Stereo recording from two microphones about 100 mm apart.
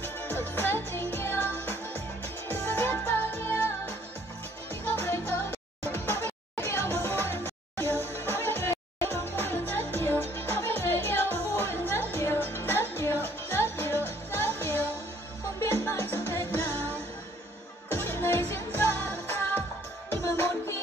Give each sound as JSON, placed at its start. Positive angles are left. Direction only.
{"t": 0.0, "sound": "music", "side_deg": 20}
{"t": 17.8, "sound": "music", "side_deg": 20}